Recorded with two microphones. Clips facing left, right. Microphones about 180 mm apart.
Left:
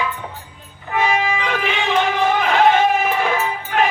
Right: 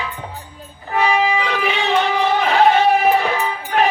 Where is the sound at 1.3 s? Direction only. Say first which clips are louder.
Right 2 dB; 45° left (ahead or behind).